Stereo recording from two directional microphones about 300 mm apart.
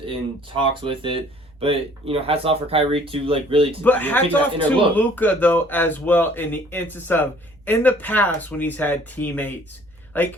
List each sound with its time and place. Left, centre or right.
0.0 s speech: centre
3.8 s speech: centre